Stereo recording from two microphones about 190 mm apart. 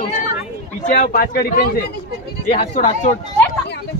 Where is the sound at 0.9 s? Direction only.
45° left (ahead or behind).